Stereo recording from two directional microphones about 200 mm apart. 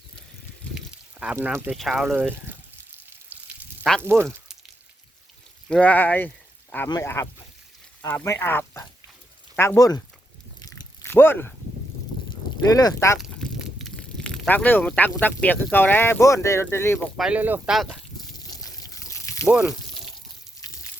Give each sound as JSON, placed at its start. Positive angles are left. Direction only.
{"t": 1.2, "sound": "speech", "side_deg": -5}
{"t": 3.1, "sound": "water", "side_deg": -10}
{"t": 4.0, "sound": "speech", "side_deg": -10}
{"t": 5.6, "sound": "speech", "side_deg": 5}
{"t": 10.6, "sound": "biting", "side_deg": 20}
{"t": 12.7, "sound": "speech", "side_deg": 15}
{"t": 13.1, "sound": "a sound", "side_deg": 0}
{"t": 15.1, "sound": "speech", "side_deg": 10}
{"t": 17.2, "sound": "speech", "side_deg": -5}
{"t": 18.3, "sound": "pour", "side_deg": 20}
{"t": 19.5, "sound": "speech", "side_deg": -5}